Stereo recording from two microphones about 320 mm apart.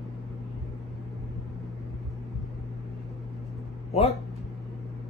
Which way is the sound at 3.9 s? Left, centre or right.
Centre.